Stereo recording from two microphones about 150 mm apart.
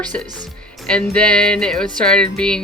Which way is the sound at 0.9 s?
5° left (ahead or behind).